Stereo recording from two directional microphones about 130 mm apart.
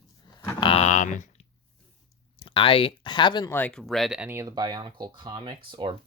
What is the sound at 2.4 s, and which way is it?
Speech, 40° left (ahead or behind).